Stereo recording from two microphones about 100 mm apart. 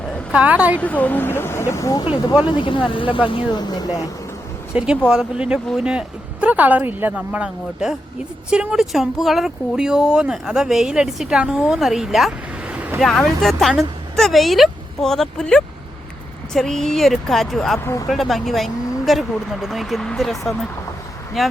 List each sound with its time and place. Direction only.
0.3 s speech: 15° right (ahead or behind)
0.8 s speech: 15° left (ahead or behind); by 2.0 s 35° left (ahead or behind)
2.4 s speech: 60° left (ahead or behind); by 4.1 s 40° left (ahead or behind)
5.0 s speech: 10° right (ahead or behind)
12.6 s boat: 15° right (ahead or behind)
13.0 s speech: 5° left (ahead or behind)